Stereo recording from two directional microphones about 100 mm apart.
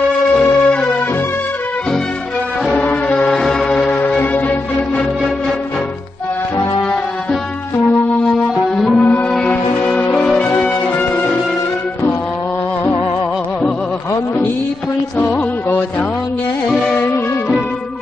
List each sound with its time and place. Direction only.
0.4 s music: 10° left (ahead or behind)
2.8 s music: 15° left (ahead or behind)
8.7 s music: 5° left (ahead or behind)
15.1 s music: 20° left (ahead or behind)
16.8 s music: 15° left (ahead or behind)